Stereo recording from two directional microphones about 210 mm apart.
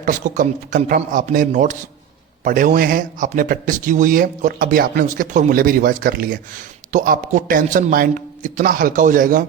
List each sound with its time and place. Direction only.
0.0 s speech: 40° right (ahead or behind)